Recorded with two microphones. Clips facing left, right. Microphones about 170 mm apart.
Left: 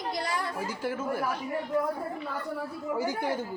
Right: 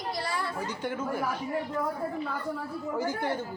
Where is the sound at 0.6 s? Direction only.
5° left (ahead or behind).